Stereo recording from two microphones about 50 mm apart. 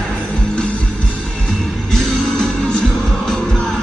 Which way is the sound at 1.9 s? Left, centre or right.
Centre.